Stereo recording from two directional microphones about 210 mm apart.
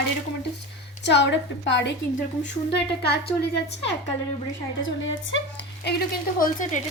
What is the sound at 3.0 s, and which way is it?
Speech, 50° left (ahead or behind).